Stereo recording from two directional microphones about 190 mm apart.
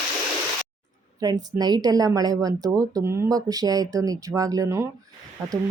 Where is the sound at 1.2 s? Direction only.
20° right (ahead or behind).